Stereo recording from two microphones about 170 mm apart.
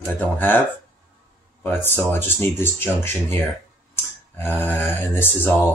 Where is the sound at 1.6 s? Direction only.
10° left (ahead or behind).